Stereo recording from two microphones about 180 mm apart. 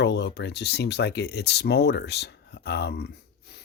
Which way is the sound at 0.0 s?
70° left (ahead or behind).